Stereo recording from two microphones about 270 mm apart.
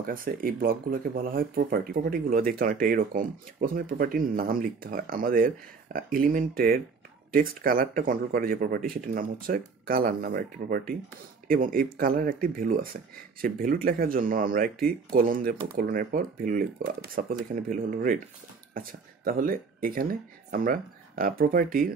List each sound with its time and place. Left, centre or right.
0.0 s speech: right